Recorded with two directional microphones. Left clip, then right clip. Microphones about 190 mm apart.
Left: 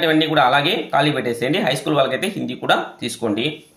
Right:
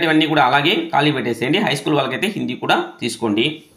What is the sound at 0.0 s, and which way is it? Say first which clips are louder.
Speech: right 1 dB; 15° right (ahead or behind).